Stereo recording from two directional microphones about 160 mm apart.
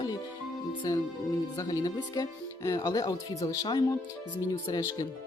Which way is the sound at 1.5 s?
25° left (ahead or behind).